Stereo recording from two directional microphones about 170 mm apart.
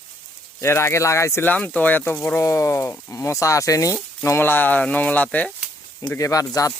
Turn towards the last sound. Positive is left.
turn(degrees=20)  # may be behind; listen again after turning